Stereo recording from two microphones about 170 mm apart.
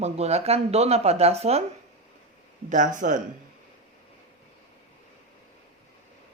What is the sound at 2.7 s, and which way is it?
Speech, 50° right (ahead or behind).